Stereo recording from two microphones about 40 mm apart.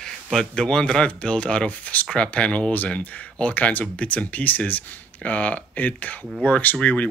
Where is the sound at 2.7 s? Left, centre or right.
Left.